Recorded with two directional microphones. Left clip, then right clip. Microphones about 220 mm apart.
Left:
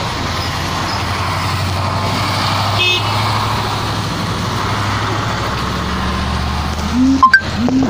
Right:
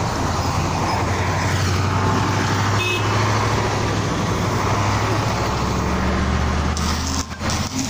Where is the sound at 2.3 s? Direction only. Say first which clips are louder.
Left 5 dB; 35° left (ahead or behind).